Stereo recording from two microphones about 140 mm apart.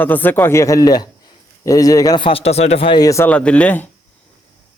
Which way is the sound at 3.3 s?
10° left (ahead or behind).